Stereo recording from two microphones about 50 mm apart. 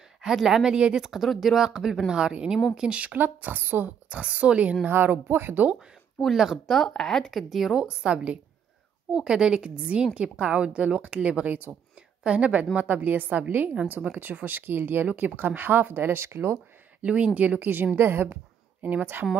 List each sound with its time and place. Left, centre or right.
0.2 s speech: centre
3.2 s speech: right
4.1 s speech: right
4.8 s speech: right
6.3 s speech: centre
7.0 s speech: centre
7.8 s a woman's voice: centre
12.7 s speech: right
17.0 s speech: right
17.9 s speech: right
19.2 s speech: right